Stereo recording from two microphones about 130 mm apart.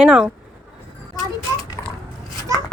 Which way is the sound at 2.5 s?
25° right (ahead or behind).